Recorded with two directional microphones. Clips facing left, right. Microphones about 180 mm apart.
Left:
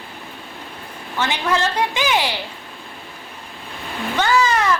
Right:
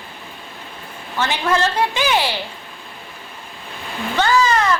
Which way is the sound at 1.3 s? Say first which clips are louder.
Right 2 dB; 15° left (ahead or behind).